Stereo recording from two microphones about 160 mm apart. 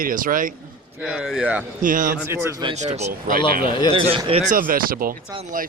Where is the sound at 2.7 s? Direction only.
45° right (ahead or behind).